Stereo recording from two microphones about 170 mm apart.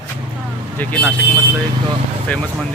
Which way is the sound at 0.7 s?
10° left (ahead or behind).